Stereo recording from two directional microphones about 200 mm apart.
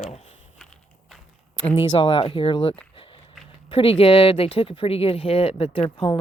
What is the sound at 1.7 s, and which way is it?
Speech, 25° left (ahead or behind).